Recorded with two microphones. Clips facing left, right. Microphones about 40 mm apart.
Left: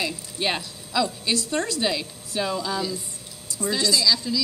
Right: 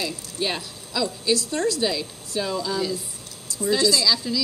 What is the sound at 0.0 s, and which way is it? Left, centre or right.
Speech, centre.